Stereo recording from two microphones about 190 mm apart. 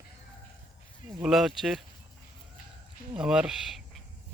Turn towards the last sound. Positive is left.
turn(degrees=-5)  # may be behind; listen again after turning